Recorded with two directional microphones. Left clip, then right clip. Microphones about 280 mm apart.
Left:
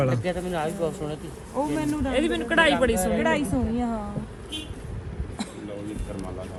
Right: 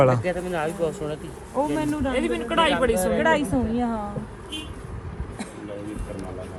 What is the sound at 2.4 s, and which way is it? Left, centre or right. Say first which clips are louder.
Speech: left 1 dB; right.